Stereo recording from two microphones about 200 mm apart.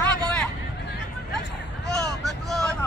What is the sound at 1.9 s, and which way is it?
Vehicle, centre (ahead or behind).